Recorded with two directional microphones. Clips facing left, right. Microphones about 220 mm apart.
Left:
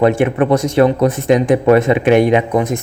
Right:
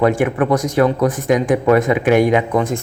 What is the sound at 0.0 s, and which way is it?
Speech, 25° left (ahead or behind).